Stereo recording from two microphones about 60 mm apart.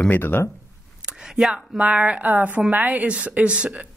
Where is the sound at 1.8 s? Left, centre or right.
Right.